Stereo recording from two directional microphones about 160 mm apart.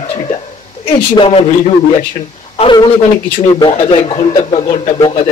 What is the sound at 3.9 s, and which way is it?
Speech, 35° left (ahead or behind).